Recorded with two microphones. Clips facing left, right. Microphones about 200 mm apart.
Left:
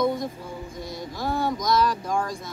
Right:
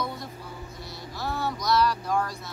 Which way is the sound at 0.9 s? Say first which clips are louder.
Left 5 dB; 50° left (ahead or behind).